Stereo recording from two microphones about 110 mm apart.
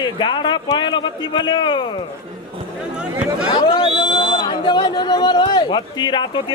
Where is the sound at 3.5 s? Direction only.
45° left (ahead or behind).